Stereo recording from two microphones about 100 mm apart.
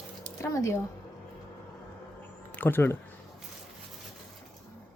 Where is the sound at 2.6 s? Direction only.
20° left (ahead or behind).